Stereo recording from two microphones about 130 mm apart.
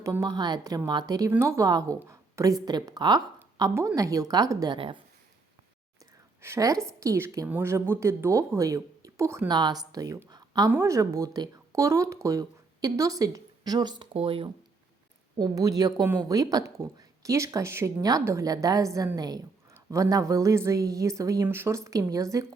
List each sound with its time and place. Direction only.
0.0 s a woman's voice: 25° right (ahead or behind)
6.4 s speech: 25° right (ahead or behind)
10.2 s a sound: 30° right (ahead or behind)
10.7 s speech: 20° right (ahead or behind)
14.1 s speech: 45° right (ahead or behind)
15.4 s speech: 30° right (ahead or behind)